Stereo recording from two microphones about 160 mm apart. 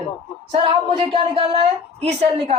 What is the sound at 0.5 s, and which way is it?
A woman's voice, 30° right (ahead or behind).